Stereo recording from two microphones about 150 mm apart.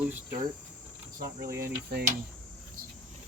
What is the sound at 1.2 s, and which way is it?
Cricket, 20° right (ahead or behind).